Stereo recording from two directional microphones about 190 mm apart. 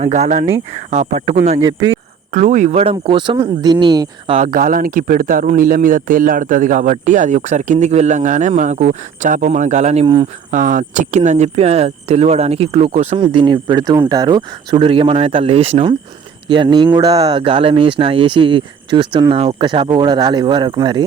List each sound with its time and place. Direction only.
0.0 s speech: 40° right (ahead or behind); by 4.4 s 20° right (ahead or behind)
4.4 s speech: 45° right (ahead or behind); by 10.2 s 30° right (ahead or behind)
10.5 s speech: 45° right (ahead or behind); by 21.0 s 25° right (ahead or behind)